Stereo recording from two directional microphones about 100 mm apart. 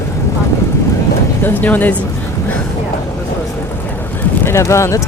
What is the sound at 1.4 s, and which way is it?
Speech, 20° left (ahead or behind).